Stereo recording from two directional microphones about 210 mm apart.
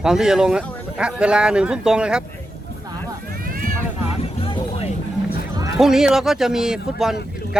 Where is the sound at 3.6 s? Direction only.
40° right (ahead or behind).